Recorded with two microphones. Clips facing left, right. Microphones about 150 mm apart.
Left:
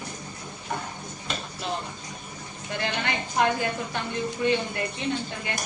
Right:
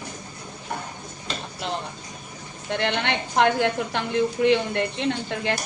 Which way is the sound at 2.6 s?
75° right (ahead or behind).